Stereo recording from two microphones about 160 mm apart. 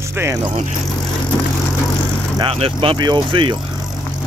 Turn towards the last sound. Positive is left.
turn(degrees=-30)  # may be behind; listen again after turning